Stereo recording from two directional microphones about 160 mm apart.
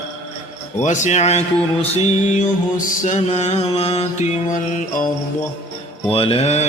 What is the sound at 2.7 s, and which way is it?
Music, 50° left (ahead or behind).